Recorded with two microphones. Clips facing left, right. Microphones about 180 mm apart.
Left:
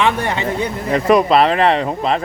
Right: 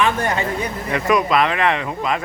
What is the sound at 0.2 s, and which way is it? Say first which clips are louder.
Speech: left 2 dB; 25° left (ahead or behind).